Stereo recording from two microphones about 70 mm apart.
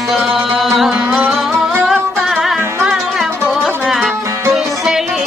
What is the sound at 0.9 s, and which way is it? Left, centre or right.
Music, right.